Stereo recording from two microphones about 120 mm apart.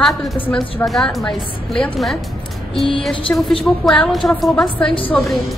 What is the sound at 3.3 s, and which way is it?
Speech, 20° left (ahead or behind).